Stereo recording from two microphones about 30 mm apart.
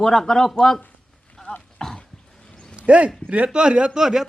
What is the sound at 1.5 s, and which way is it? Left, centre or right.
Speech, left.